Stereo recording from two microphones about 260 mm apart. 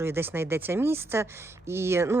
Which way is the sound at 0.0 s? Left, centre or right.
Centre.